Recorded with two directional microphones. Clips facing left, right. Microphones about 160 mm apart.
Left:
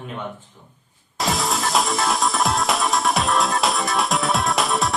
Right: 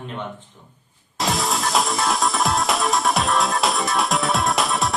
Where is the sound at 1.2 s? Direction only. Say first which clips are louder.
Even; centre (ahead or behind).